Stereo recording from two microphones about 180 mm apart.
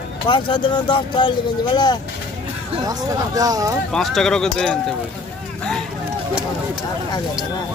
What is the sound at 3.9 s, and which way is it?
Speech, centre (ahead or behind).